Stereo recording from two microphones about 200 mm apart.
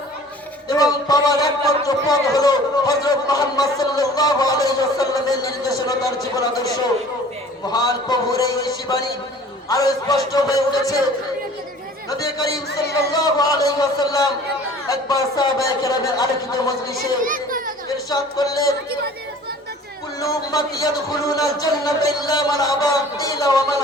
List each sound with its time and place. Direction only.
0.7 s a man's voice: 20° left (ahead or behind)
7.7 s a man's voice: 20° left (ahead or behind)
12.2 s a man's voice: 20° left (ahead or behind)
17.2 s children playing: 45° right (ahead or behind)
18.1 s speech: 20° left (ahead or behind)
20.2 s a man's voice: 20° left (ahead or behind)